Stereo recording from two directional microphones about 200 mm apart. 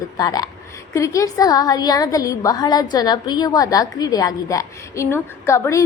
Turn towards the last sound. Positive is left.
turn(degrees=15)  # may be behind; listen again after turning